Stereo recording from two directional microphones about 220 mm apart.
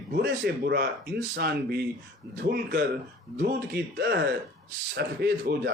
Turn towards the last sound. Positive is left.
turn(degrees=-45)  # may be behind; listen again after turning